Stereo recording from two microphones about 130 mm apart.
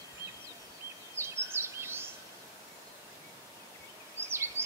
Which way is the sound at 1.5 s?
20° right (ahead or behind).